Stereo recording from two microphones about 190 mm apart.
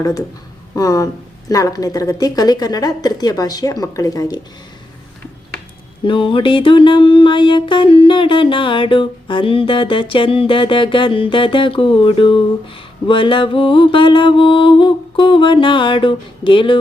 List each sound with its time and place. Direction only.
0.8 s music: 15° left (ahead or behind)
6.1 s music: 25° left (ahead or behind)